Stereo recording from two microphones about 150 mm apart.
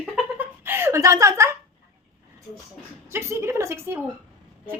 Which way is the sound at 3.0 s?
15° right (ahead or behind).